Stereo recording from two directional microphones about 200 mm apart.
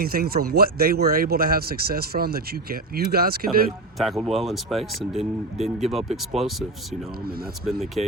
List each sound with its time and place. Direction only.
0.0 s speech: 45° right (ahead or behind)
3.9 s speech: centre (ahead or behind)
7.6 s speech: centre (ahead or behind)